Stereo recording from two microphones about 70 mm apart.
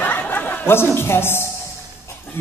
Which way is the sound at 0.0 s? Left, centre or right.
Left.